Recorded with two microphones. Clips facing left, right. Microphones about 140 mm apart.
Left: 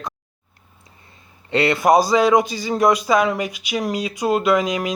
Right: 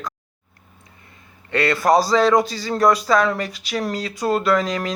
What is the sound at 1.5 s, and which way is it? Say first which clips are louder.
Speech: left 2 dB; 20° left (ahead or behind).